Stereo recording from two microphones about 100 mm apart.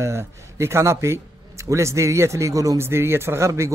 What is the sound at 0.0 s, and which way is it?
Speech, 25° right (ahead or behind).